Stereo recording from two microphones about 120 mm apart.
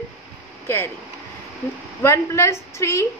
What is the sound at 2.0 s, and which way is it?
A woman's voice, 25° left (ahead or behind).